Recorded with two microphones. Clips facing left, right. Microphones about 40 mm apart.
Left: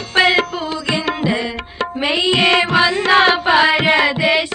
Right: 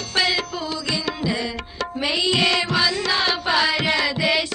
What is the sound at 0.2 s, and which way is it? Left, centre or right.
Music, left.